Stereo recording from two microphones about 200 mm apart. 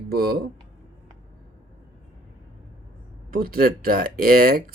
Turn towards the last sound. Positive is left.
turn(degrees=-45)  # may be behind; listen again after turning